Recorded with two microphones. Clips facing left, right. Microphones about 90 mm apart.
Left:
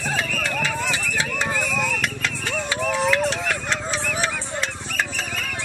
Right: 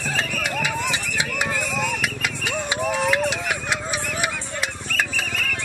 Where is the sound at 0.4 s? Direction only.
15° right (ahead or behind).